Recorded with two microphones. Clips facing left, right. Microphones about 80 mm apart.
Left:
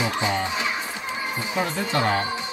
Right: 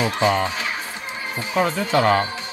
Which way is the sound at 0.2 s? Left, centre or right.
Right.